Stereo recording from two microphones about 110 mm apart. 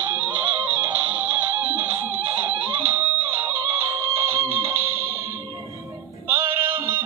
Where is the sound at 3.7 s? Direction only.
25° right (ahead or behind).